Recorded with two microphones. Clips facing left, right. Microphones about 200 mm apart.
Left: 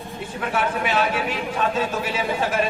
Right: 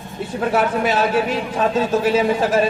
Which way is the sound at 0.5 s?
40° right (ahead or behind).